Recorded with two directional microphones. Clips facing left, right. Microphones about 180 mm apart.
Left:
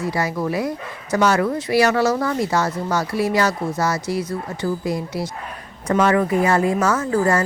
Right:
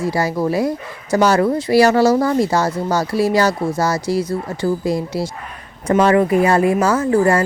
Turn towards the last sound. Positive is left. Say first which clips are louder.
# right 4 dB
turn(degrees=-30)  # may be behind; listen again after turning